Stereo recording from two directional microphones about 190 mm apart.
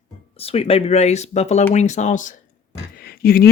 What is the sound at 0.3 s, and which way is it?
Speech, 30° left (ahead or behind).